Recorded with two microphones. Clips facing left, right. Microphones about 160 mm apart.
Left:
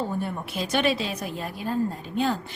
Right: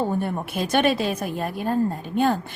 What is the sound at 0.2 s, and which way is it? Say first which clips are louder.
A woman's voice: right 4 dB; 55° right (ahead or behind).